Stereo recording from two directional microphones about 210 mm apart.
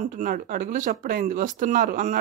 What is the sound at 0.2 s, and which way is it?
Speech, 40° right (ahead or behind).